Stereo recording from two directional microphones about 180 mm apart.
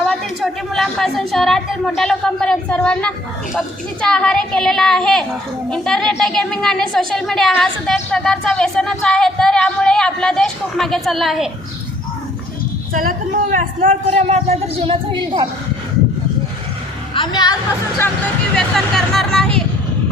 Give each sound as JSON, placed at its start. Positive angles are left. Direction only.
{"t": 0.0, "sound": "a woman's voice", "side_deg": 5}
{"t": 12.9, "sound": "speech", "side_deg": -50}
{"t": 13.8, "sound": "a man's voice", "side_deg": -40}
{"t": 17.2, "sound": "a woman's voice", "side_deg": 25}
{"t": 18.5, "sound": "a woman's voice", "side_deg": 0}